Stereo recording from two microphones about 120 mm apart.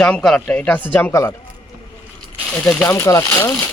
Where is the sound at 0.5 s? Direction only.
15° left (ahead or behind).